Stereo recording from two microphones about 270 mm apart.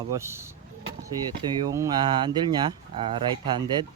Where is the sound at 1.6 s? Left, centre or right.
Centre.